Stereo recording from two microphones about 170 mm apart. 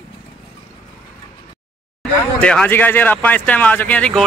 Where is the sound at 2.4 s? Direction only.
5° left (ahead or behind).